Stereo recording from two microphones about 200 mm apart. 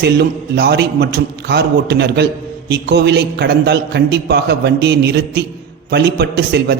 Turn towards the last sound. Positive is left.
turn(degrees=-55)  # may be behind; listen again after turning